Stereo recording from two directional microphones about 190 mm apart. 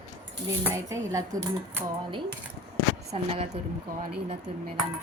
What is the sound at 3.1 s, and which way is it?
Speech, 35° right (ahead or behind).